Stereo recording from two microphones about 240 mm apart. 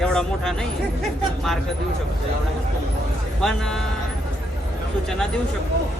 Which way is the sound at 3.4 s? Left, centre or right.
Centre.